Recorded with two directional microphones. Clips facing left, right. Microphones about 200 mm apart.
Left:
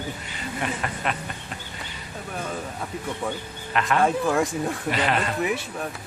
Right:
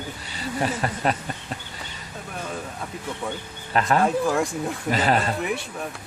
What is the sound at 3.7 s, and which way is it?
Speech, 35° right (ahead or behind).